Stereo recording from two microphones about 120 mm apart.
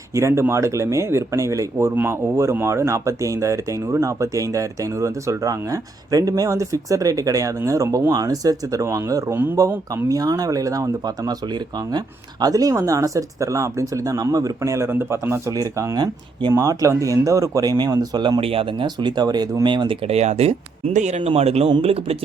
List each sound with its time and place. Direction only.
0.1 s speech: 25° right (ahead or behind)
18.3 s speech: 50° right (ahead or behind)
20.1 s speech: 60° right (ahead or behind)